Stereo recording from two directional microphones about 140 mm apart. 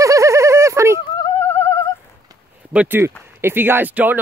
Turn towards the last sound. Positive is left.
turn(degrees=-10)  # may be behind; listen again after turning